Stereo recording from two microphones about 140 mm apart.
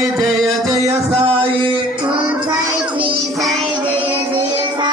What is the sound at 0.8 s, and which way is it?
Music, 45° right (ahead or behind).